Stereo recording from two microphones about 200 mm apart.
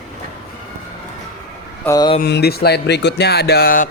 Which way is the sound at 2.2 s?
50° left (ahead or behind).